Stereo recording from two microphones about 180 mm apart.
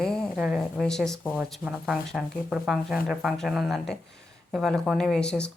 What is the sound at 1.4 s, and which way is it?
Speech, 10° right (ahead or behind).